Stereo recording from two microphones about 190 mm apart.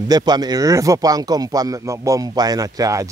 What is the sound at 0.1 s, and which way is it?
Speech, 20° right (ahead or behind).